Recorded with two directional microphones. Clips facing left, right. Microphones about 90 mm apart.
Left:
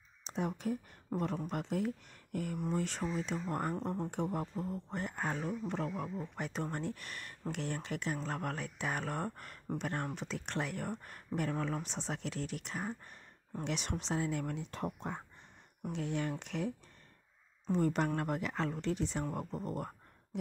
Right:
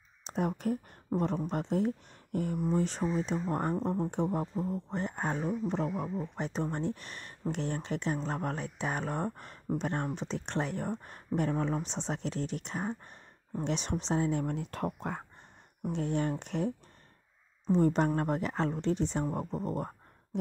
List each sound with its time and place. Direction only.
0.2 s speech: 50° right (ahead or behind)
1.1 s speech: 30° right (ahead or behind)
14.5 s speech: 55° right (ahead or behind)
15.9 s speech: 40° right (ahead or behind)